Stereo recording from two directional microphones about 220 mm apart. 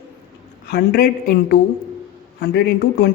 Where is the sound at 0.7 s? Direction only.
45° left (ahead or behind).